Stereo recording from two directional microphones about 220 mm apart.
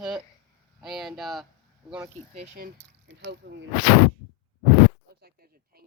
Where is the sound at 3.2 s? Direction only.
50° right (ahead or behind).